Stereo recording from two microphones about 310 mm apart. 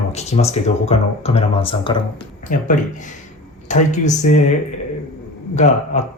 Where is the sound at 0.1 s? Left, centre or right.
Left.